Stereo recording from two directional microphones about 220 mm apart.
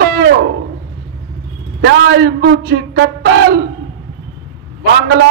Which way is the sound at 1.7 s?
55° right (ahead or behind).